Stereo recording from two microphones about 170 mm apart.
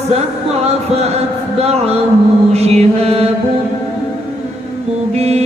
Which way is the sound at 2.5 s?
40° right (ahead or behind).